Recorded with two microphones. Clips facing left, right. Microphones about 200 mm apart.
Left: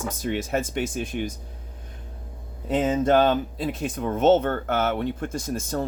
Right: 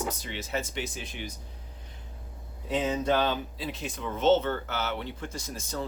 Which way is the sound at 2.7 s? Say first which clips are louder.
Left 6 dB; 50° left (ahead or behind).